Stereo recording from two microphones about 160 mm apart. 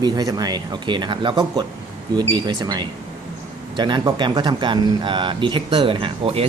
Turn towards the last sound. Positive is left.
turn(degrees=-35)  # may be behind; listen again after turning